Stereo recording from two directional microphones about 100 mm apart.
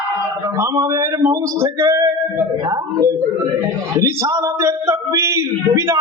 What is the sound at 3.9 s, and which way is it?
Speech, 30° right (ahead or behind).